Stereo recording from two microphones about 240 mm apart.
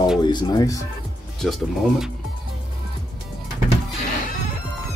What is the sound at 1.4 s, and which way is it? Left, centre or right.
Speech, centre.